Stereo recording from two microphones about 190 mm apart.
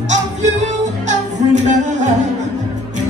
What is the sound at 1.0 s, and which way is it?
Music, 40° right (ahead or behind).